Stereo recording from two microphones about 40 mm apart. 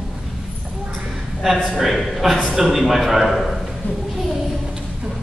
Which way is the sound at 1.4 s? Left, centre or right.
Centre.